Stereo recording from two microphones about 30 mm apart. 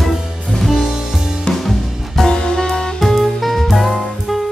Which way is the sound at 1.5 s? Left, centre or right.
Centre.